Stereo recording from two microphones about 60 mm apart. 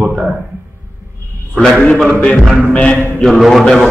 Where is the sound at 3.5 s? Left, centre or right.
Centre.